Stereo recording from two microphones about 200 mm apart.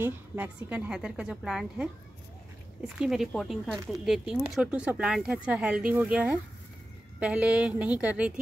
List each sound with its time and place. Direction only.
0.0 s speech: 10° right (ahead or behind)
3.0 s a woman's voice: centre (ahead or behind)